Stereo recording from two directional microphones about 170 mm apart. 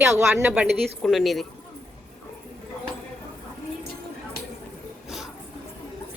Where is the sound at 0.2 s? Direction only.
15° right (ahead or behind).